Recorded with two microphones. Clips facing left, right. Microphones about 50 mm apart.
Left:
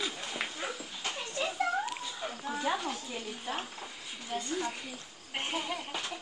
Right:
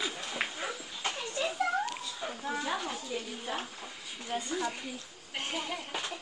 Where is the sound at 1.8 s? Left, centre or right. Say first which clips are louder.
Even; centre.